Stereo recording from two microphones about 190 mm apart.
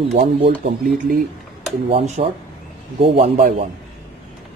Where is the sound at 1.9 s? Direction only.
35° right (ahead or behind).